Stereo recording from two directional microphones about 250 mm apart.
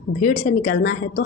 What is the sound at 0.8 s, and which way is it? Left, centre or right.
Speech, left.